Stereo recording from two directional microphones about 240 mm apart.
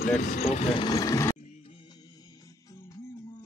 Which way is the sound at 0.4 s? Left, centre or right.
Left.